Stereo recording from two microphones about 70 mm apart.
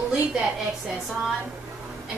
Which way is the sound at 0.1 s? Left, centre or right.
Centre.